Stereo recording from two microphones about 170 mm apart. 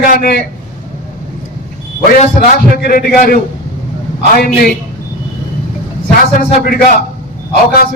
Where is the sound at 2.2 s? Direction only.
60° left (ahead or behind).